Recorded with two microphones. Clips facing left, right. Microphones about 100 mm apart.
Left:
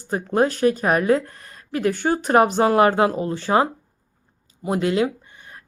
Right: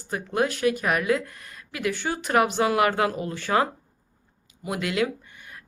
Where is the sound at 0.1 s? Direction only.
35° left (ahead or behind).